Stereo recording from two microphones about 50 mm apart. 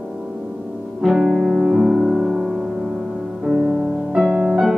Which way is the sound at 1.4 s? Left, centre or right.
Centre.